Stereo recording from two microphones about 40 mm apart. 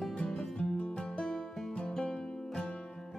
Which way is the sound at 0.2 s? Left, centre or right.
Centre.